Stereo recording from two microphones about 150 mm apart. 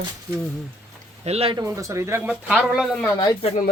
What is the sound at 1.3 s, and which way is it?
Speech, 40° right (ahead or behind).